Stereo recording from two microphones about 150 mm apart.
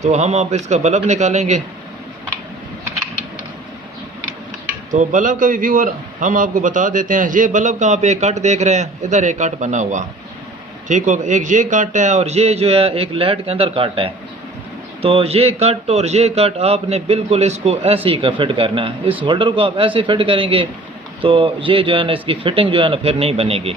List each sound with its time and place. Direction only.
0.0 s speech: 50° right (ahead or behind)
4.9 s a man's voice: 55° right (ahead or behind); by 23.7 s 40° right (ahead or behind)